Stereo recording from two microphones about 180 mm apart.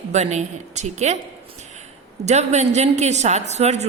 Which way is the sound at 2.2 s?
40° right (ahead or behind).